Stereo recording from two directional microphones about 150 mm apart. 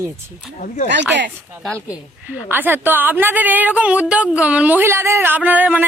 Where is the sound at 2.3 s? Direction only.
10° right (ahead or behind).